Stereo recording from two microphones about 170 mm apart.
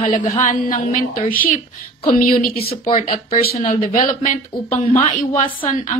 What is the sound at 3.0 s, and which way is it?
A woman's voice, 45° left (ahead or behind).